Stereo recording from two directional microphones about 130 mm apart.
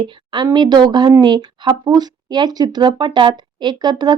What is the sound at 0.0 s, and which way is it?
A woman's voice, 35° right (ahead or behind).